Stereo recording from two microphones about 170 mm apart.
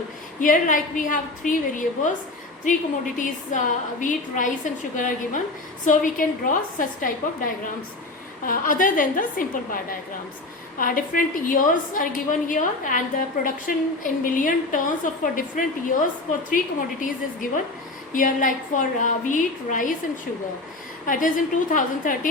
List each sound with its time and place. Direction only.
0.3 s a woman's voice: 50° left (ahead or behind)
3.2 s a woman's voice: 50° left (ahead or behind)
21.1 s a woman's voice: 50° left (ahead or behind)